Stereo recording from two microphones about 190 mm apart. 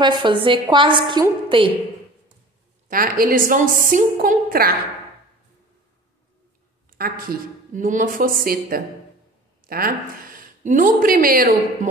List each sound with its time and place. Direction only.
0.0 s a woman's voice: 25° right (ahead or behind)
2.9 s a woman's voice: 50° right (ahead or behind)
7.0 s a woman's voice: 50° right (ahead or behind)